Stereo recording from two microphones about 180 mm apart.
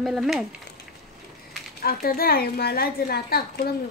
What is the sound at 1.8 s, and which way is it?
A woman's voice, 55° left (ahead or behind).